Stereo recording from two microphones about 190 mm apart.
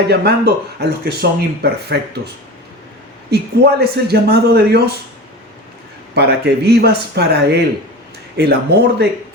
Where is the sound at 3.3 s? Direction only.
55° right (ahead or behind).